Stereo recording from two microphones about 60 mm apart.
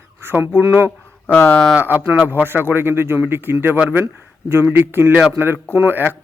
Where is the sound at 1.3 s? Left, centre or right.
Left.